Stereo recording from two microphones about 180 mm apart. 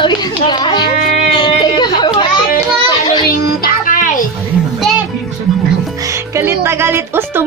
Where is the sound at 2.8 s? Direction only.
25° left (ahead or behind).